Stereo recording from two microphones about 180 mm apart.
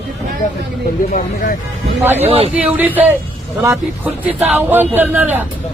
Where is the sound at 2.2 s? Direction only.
30° right (ahead or behind).